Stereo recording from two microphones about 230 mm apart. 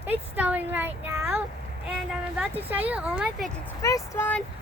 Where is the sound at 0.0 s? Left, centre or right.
Centre.